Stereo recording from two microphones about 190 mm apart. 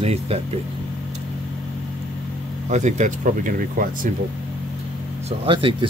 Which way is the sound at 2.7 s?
40° right (ahead or behind).